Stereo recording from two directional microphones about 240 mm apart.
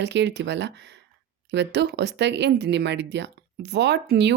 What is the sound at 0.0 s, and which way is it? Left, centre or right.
Speech, right.